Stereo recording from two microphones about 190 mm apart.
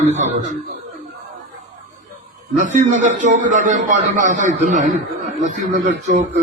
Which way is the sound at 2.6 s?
40° right (ahead or behind).